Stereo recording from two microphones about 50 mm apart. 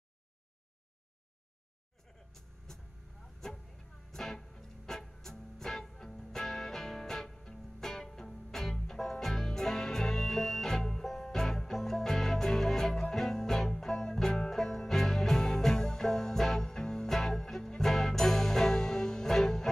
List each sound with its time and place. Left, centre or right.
2.3 s music: centre
3.4 s vehicle: centre
4.1 s music: centre